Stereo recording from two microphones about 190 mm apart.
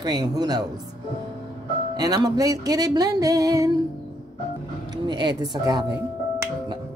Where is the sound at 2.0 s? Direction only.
20° right (ahead or behind).